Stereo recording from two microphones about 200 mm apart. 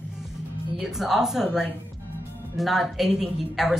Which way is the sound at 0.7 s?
Centre (ahead or behind).